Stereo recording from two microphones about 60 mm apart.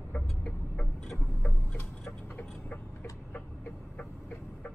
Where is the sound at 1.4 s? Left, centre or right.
Left.